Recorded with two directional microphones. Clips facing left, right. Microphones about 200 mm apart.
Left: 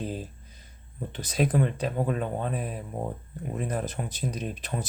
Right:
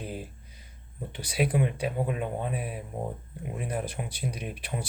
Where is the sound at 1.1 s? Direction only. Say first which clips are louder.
Left 2 dB; 10° right (ahead or behind).